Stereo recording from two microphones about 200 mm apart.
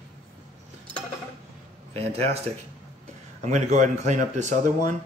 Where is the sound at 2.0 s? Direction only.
30° right (ahead or behind).